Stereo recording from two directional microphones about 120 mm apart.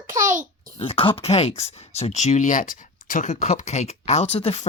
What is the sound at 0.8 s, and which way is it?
Speech, 50° left (ahead or behind).